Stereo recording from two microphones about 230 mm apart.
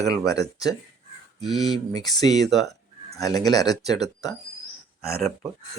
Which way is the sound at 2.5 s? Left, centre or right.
Centre.